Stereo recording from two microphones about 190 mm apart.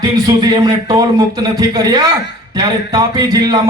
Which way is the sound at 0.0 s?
20° right (ahead or behind).